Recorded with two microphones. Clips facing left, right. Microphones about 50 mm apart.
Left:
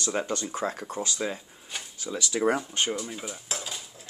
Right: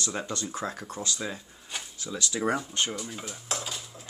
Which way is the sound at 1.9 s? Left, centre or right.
Left.